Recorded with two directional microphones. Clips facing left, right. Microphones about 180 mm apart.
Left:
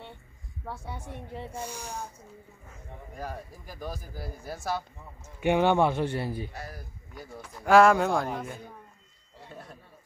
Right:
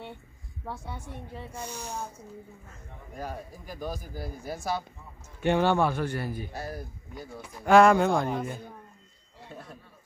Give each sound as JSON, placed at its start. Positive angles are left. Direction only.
{"t": 1.5, "sound": "speech", "side_deg": 10}
{"t": 3.2, "sound": "speech", "side_deg": 0}
{"t": 5.4, "sound": "a man's voice", "side_deg": 15}
{"t": 6.5, "sound": "speech", "side_deg": -30}
{"t": 7.2, "sound": "speech", "side_deg": -10}
{"t": 7.6, "sound": "speech", "side_deg": 5}